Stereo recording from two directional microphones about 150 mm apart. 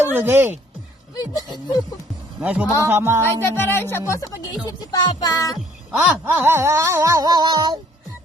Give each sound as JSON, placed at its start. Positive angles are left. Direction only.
{"t": 0.2, "sound": "speech", "side_deg": -15}
{"t": 1.1, "sound": "speech", "side_deg": 25}
{"t": 2.4, "sound": "speech", "side_deg": -10}
{"t": 3.4, "sound": "speech", "side_deg": 15}
{"t": 6.0, "sound": "a sound", "side_deg": -15}